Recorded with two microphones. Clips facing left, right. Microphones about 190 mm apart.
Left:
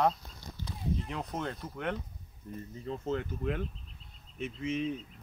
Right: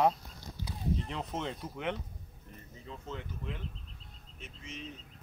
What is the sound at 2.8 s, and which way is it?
Speech, 50° left (ahead or behind).